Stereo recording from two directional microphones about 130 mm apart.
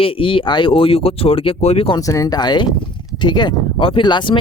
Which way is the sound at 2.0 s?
25° left (ahead or behind).